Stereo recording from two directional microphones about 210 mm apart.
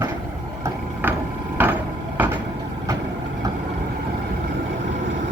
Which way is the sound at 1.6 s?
10° right (ahead or behind).